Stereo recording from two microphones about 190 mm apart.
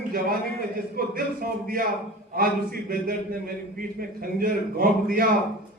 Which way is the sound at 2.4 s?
50° right (ahead or behind).